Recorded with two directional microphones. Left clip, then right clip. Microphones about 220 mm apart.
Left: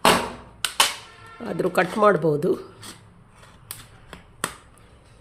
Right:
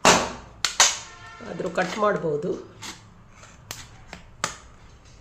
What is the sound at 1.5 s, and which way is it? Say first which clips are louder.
Speech: left 4 dB; 45° left (ahead or behind).